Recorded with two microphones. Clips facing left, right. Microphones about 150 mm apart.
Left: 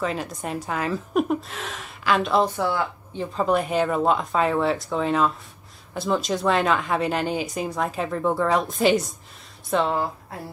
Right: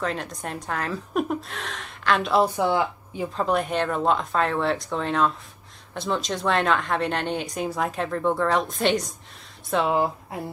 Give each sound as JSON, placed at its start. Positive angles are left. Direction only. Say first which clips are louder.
{"t": 0.0, "sound": "a woman's voice", "louder": "left 2 dB", "side_deg": 5}
{"t": 2.4, "sound": "a woman's voice", "louder": "right 2 dB", "side_deg": -15}
{"t": 3.3, "sound": "a woman's voice", "louder": "left 3 dB", "side_deg": 0}
{"t": 9.9, "sound": "a woman's voice", "louder": "right 3 dB", "side_deg": -15}